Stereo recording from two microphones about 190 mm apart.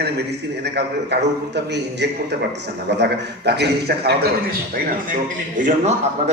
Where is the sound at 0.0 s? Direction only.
60° right (ahead or behind).